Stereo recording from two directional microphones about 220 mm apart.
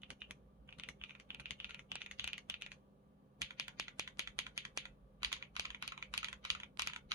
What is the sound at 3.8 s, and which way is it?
Typing, 15° right (ahead or behind).